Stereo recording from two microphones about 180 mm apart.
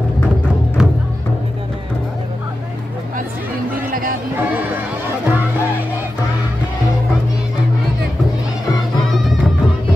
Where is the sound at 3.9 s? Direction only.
50° right (ahead or behind).